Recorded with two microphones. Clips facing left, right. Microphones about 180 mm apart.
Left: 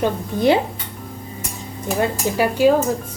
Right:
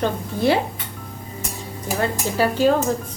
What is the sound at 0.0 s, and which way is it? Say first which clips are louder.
Speech: left 3 dB; 20° left (ahead or behind).